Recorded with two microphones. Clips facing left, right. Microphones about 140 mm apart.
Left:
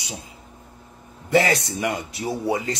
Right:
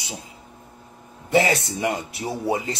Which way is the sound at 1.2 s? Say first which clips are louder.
Even; 20° right (ahead or behind).